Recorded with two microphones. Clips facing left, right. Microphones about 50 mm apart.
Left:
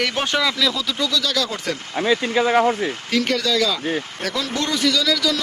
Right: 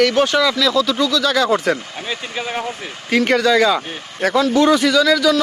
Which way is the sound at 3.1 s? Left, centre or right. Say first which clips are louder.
Right 7 dB; right.